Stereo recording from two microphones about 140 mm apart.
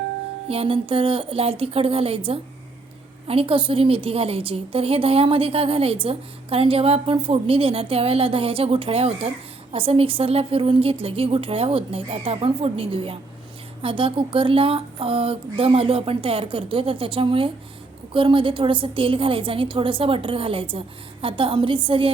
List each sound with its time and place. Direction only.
0.4 s a woman's voice: 45° right (ahead or behind)